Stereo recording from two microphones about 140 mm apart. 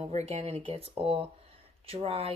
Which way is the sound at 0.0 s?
50° right (ahead or behind).